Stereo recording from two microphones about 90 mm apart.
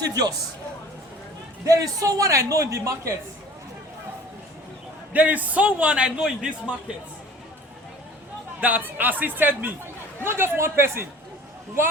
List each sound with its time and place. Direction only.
0.0 s a man's voice: 45° right (ahead or behind)
1.6 s a man's voice: 40° right (ahead or behind)
5.1 s a man's voice: 20° right (ahead or behind)
8.6 s speech: 20° right (ahead or behind)